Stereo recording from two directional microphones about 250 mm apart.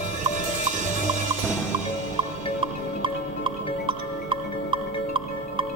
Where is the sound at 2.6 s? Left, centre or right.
Centre.